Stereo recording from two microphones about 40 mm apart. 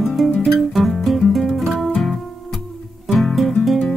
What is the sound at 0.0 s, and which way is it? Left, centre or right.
Music, centre.